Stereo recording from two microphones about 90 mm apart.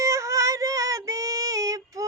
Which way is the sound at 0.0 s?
35° right (ahead or behind).